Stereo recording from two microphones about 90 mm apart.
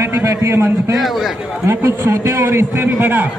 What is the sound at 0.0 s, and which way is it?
A man's voice, 35° right (ahead or behind).